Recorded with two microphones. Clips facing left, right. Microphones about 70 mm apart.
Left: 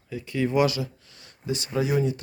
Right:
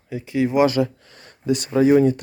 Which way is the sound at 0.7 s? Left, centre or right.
Right.